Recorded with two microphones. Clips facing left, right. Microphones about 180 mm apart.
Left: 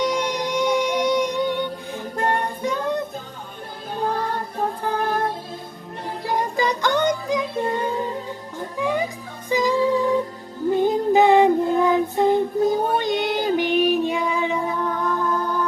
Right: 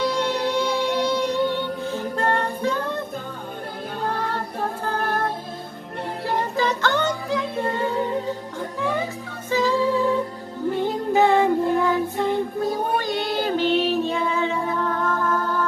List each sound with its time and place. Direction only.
0.0 s music: 15° left (ahead or behind)
6.2 s music: 15° left (ahead or behind)